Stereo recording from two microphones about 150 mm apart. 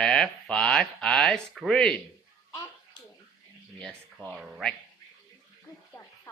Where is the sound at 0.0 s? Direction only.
5° left (ahead or behind).